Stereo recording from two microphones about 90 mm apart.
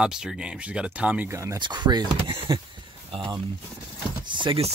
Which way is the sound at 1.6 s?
55° right (ahead or behind).